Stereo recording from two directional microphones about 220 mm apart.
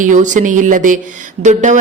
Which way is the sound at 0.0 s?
35° right (ahead or behind).